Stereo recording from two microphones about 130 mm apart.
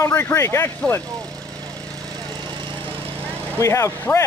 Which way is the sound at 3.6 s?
25° left (ahead or behind).